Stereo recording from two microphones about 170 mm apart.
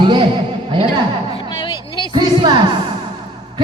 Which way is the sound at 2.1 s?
25° right (ahead or behind).